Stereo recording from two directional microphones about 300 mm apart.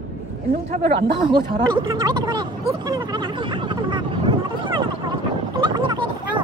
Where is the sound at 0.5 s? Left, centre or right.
Right.